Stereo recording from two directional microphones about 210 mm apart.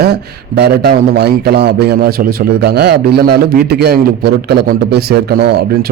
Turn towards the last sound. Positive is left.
turn(degrees=-50)  # may be behind; listen again after turning